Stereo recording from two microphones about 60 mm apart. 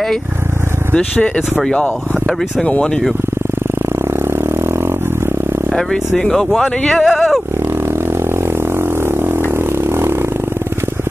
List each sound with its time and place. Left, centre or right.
0.9 s speech: left
5.8 s speech: centre
8.7 s a sound: right